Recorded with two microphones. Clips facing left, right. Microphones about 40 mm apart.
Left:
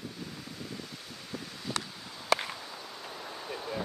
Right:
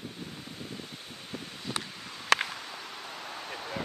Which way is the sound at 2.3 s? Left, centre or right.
Right.